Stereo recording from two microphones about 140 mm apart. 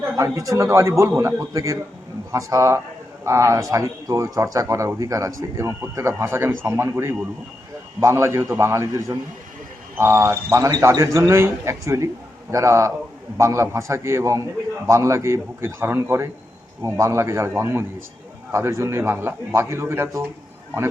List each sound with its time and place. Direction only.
0.2 s a man's voice: 20° right (ahead or behind)